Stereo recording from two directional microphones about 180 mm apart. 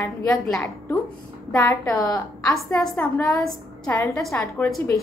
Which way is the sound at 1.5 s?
20° left (ahead or behind).